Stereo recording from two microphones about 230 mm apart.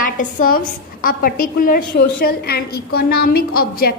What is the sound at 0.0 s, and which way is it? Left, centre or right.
A woman's voice, left.